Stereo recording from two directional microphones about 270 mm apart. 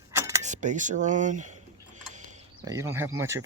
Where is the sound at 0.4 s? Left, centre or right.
Right.